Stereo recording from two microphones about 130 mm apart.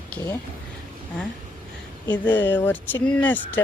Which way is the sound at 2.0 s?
35° left (ahead or behind).